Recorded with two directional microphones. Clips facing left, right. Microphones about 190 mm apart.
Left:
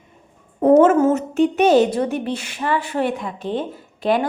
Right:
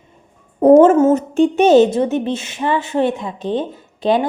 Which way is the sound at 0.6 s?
30° right (ahead or behind).